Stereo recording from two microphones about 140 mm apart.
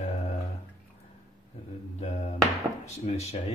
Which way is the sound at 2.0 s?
50° left (ahead or behind).